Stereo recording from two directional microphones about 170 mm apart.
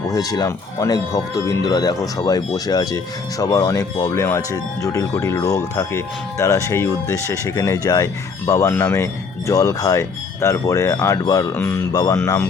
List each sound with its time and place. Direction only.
0.1 s speech: 20° left (ahead or behind)